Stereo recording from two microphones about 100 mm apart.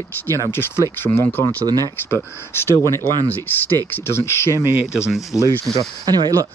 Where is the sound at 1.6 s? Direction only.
40° right (ahead or behind).